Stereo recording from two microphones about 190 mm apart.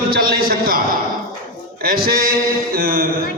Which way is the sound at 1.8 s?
50° right (ahead or behind).